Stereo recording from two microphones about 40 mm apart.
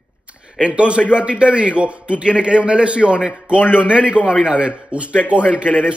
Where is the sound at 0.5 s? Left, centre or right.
Right.